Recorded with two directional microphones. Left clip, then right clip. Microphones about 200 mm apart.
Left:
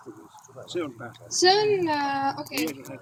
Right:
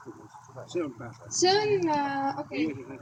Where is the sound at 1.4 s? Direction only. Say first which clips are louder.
Left 3 dB; 40° right (ahead or behind).